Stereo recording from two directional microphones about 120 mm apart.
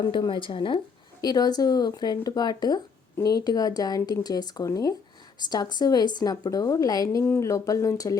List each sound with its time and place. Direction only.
0.0 s speech: 40° left (ahead or behind)
1.2 s a woman's voice: 35° left (ahead or behind)